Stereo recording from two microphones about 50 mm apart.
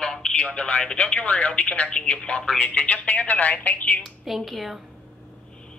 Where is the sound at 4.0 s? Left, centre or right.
Centre.